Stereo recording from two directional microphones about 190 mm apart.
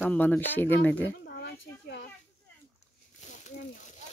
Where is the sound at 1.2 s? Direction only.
65° left (ahead or behind).